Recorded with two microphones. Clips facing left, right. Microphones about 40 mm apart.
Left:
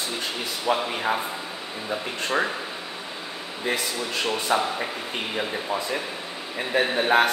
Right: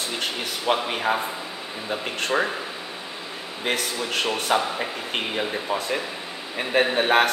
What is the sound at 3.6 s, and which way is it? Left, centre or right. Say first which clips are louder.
Speech: right 1 dB; right.